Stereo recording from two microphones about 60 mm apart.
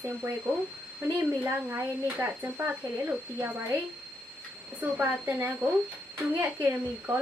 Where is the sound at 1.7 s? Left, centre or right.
Right.